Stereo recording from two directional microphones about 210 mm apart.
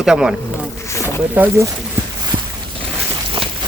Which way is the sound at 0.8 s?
15° left (ahead or behind).